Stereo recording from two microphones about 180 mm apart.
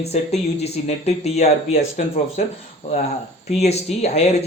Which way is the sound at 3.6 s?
35° left (ahead or behind).